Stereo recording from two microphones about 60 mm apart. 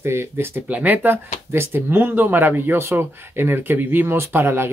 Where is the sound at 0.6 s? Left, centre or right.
Right.